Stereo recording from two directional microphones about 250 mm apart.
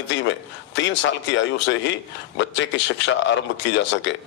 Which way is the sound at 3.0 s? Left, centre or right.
Left.